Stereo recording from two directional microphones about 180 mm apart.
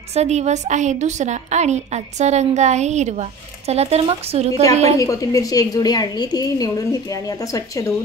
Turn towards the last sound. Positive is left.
turn(degrees=20)  # may be behind; listen again after turning